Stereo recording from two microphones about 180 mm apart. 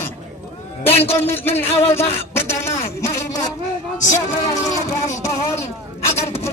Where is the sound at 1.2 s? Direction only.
10° left (ahead or behind).